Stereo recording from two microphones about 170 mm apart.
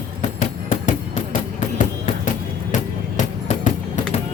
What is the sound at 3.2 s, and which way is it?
Music, 45° left (ahead or behind).